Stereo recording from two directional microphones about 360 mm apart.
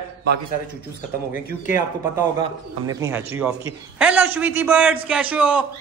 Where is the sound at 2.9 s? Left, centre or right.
Centre.